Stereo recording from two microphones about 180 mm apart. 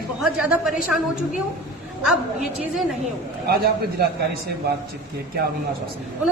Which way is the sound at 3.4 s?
55° right (ahead or behind).